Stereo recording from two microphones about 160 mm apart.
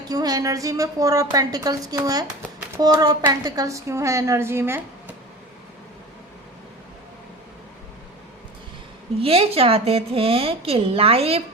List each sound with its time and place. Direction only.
0.1 s a woman's voice: 25° right (ahead or behind)
9.2 s a woman's voice: 35° right (ahead or behind)